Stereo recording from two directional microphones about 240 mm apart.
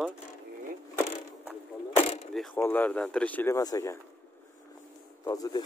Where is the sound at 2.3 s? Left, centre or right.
Centre.